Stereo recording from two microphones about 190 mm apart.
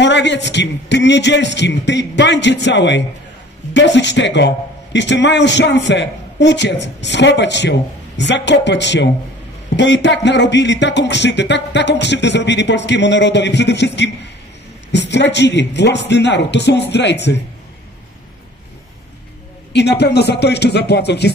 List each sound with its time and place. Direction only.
0.0 s music: 65° left (ahead or behind)
14.9 s speech: 65° left (ahead or behind)
19.7 s speech: 60° left (ahead or behind)